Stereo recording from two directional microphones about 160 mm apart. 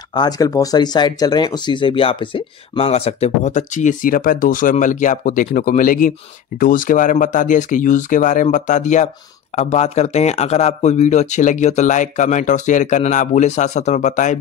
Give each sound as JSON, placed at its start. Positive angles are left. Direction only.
{"t": 0.1, "sound": "a man's voice", "side_deg": 25}